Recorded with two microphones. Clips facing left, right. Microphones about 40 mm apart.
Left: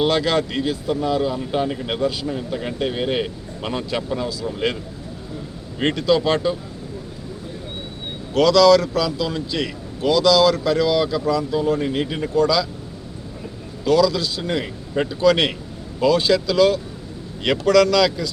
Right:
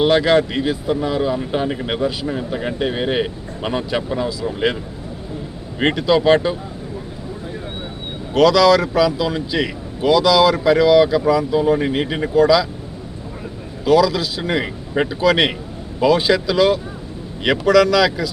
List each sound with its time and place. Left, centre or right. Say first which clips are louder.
0.0 s speech: right 5 dB; centre
5.8 s speech: right 3 dB; centre
8.3 s speech: right 1 dB; centre
13.8 s speech: right 2 dB; centre